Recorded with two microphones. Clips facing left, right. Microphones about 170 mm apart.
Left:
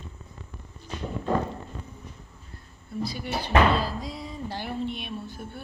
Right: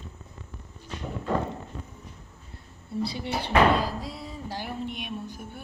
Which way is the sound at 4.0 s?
5° right (ahead or behind).